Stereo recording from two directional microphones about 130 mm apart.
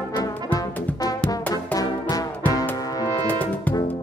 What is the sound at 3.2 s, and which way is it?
Brass instrument, 15° left (ahead or behind).